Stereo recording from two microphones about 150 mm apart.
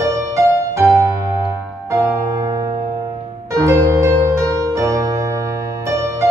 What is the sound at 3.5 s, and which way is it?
Music, 20° right (ahead or behind).